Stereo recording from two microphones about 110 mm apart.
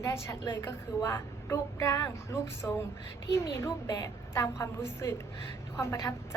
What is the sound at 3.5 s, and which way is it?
A woman's voice, 30° left (ahead or behind).